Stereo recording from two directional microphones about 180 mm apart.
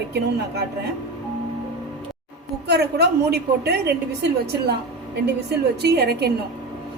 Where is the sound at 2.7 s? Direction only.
65° right (ahead or behind).